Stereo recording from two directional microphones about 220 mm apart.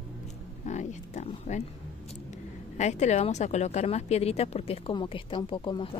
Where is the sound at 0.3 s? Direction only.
30° left (ahead or behind).